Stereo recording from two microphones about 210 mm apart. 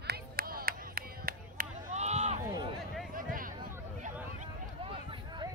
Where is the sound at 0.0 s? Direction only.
45° right (ahead or behind).